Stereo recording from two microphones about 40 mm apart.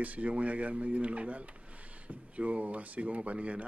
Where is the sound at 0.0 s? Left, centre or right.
Right.